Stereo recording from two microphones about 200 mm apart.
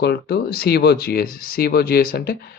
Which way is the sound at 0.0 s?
55° left (ahead or behind).